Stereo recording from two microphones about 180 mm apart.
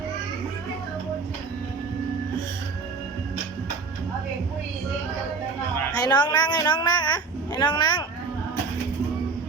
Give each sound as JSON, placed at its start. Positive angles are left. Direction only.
{"t": 5.9, "sound": "speech", "side_deg": 25}